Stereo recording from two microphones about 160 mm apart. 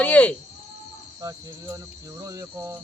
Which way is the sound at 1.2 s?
25° right (ahead or behind).